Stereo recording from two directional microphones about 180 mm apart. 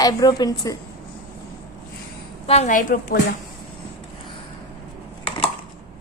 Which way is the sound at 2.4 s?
35° left (ahead or behind).